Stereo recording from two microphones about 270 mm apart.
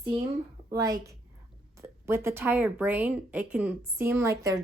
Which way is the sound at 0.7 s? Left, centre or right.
Centre.